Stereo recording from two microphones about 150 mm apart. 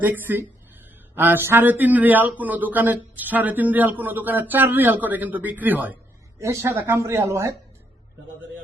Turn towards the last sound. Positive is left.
turn(degrees=-20)  # may be behind; listen again after turning